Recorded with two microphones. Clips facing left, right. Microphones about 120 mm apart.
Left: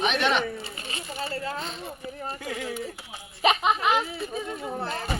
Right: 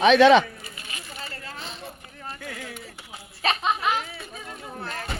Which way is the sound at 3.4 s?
15° left (ahead or behind).